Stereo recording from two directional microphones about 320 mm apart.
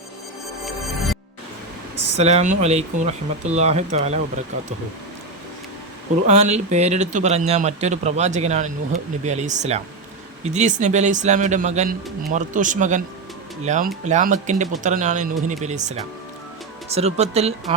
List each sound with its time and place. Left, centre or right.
0.6 s music: centre
2.1 s speech: centre
6.2 s speech: right